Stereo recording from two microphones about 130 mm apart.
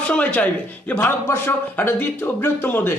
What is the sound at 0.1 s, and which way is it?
Speech, 10° left (ahead or behind).